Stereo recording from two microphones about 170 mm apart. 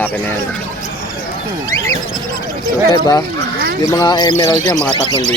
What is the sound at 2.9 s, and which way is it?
Speech, 20° left (ahead or behind).